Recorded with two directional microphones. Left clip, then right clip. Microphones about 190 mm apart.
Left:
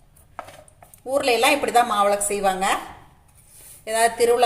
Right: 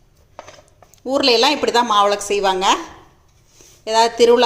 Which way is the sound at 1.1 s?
40° right (ahead or behind).